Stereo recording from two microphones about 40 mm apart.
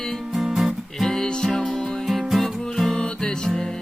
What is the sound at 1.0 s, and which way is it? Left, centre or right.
Music, centre.